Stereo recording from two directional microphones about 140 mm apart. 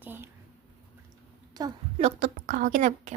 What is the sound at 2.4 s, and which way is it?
Speech, 70° right (ahead or behind).